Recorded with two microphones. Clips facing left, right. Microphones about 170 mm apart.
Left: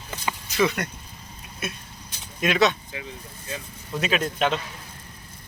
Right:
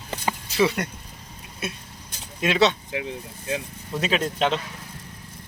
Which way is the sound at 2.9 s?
75° right (ahead or behind).